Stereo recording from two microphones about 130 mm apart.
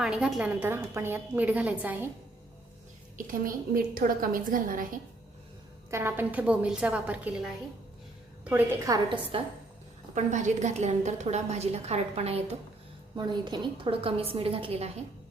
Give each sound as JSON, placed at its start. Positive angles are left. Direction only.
{"t": 0.0, "sound": "a woman's voice", "side_deg": -5}
{"t": 3.2, "sound": "a woman's voice", "side_deg": -90}
{"t": 5.9, "sound": "a woman's voice", "side_deg": -20}
{"t": 8.9, "sound": "a woman's voice", "side_deg": -30}
{"t": 9.3, "sound": "a woman's voice", "side_deg": -45}
{"t": 10.2, "sound": "a woman's voice", "side_deg": -65}
{"t": 13.1, "sound": "a woman's voice", "side_deg": -35}